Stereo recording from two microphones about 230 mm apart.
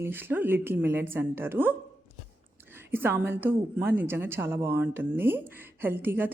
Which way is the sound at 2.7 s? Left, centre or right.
Centre.